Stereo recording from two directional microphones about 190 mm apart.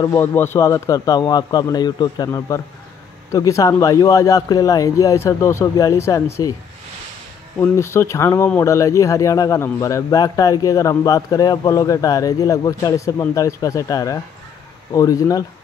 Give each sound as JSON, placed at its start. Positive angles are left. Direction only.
{"t": 0.0, "sound": "speech", "side_deg": 15}
{"t": 7.5, "sound": "speech", "side_deg": 15}